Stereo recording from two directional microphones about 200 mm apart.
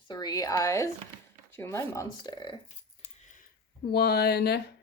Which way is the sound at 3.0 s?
40° left (ahead or behind).